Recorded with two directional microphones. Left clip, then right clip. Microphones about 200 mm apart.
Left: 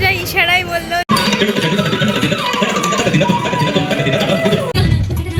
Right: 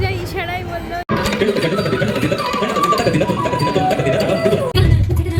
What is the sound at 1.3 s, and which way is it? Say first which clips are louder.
Music: left 2 dB; 50° right (ahead or behind).